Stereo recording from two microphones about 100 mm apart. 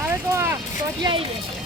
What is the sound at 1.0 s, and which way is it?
Speech, 60° right (ahead or behind).